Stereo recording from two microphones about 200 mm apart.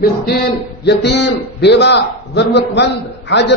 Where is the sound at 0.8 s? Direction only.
60° left (ahead or behind).